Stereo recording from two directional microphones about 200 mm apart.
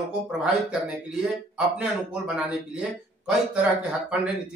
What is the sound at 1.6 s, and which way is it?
Speech, 5° right (ahead or behind).